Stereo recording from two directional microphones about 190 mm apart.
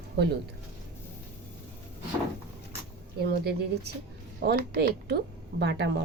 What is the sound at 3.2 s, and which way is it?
A woman's voice, 60° right (ahead or behind).